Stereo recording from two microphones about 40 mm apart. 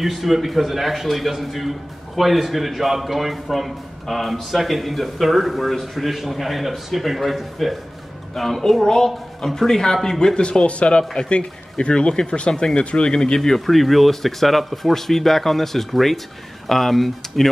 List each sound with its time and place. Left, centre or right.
0.0 s a man's voice: centre; by 13.4 s left
13.4 s a man's voice: centre